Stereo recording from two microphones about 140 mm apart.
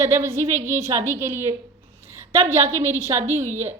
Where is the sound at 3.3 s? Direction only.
55° right (ahead or behind).